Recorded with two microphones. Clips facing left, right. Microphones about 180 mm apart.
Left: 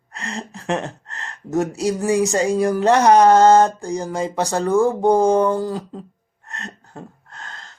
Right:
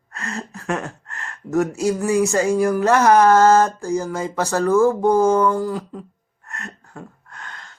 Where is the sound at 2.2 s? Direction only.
20° left (ahead or behind).